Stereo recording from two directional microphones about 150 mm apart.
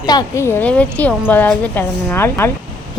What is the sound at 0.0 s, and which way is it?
A woman's voice, 25° left (ahead or behind).